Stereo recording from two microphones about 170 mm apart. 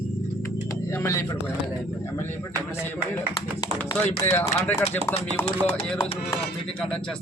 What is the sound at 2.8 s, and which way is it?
Speech, 15° left (ahead or behind).